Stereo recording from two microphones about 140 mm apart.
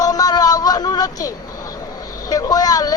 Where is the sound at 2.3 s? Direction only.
25° left (ahead or behind).